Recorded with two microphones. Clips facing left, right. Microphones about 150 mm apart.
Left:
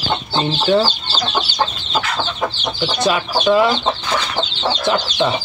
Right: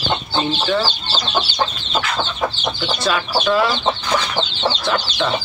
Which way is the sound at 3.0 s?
15° left (ahead or behind).